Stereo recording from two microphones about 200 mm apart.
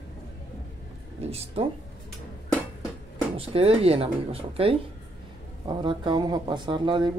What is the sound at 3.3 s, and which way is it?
Speech, 30° right (ahead or behind).